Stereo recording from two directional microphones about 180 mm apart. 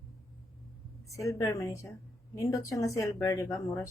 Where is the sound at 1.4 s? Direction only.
20° left (ahead or behind).